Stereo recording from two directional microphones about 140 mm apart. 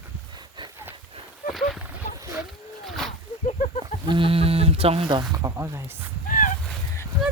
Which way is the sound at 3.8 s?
35° right (ahead or behind).